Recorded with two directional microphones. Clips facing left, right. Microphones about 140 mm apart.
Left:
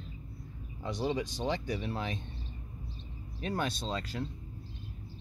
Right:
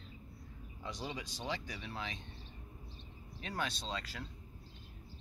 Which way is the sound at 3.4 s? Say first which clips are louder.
Left 6 dB; 45° left (ahead or behind).